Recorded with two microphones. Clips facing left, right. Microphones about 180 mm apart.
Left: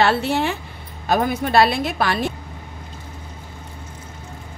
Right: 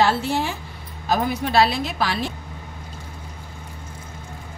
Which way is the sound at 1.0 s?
55° left (ahead or behind).